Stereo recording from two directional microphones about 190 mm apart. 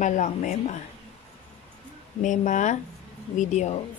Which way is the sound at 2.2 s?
40° left (ahead or behind).